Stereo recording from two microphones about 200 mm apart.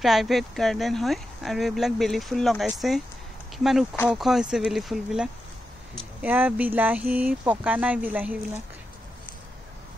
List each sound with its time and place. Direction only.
0.0 s speech: centre (ahead or behind)